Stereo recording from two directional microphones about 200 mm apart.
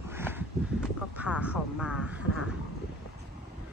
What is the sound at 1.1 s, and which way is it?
Speech, 5° right (ahead or behind).